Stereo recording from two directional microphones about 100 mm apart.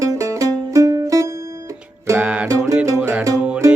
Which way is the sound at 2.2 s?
10° right (ahead or behind).